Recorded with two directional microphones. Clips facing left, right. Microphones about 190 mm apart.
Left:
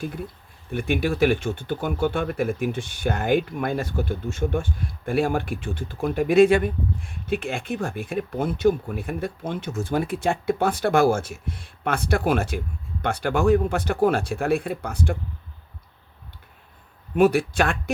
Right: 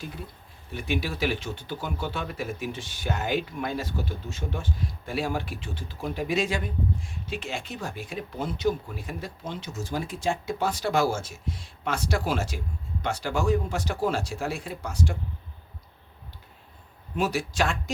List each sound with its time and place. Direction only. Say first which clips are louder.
0.7 s speech: left 6 dB; 55° left (ahead or behind)
17.2 s speech: left 8 dB; 55° left (ahead or behind)